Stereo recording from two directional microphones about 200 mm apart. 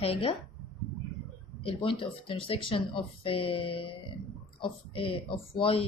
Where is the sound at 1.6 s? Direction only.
30° left (ahead or behind).